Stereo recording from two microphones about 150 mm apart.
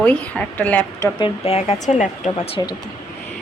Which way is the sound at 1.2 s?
40° left (ahead or behind).